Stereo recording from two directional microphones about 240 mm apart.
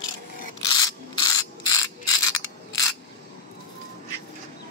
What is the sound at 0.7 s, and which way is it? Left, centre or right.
Ratchet, centre.